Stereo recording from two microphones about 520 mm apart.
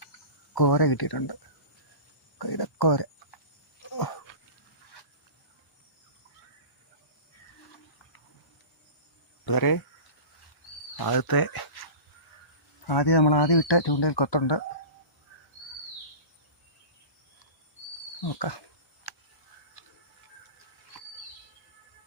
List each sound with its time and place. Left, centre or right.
0.5 s speech: left
2.4 s speech: left
3.9 s a sound: left
9.5 s speech: left
10.9 s speech: left
12.9 s speech: left
18.2 s a sound: left